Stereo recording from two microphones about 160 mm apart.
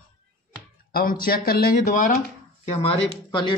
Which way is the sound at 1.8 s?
55° left (ahead or behind).